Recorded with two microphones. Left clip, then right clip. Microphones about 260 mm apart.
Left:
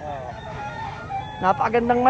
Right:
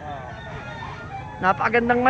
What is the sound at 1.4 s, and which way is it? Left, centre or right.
Speech, centre.